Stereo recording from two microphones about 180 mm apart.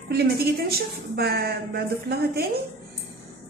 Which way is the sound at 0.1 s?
60° right (ahead or behind).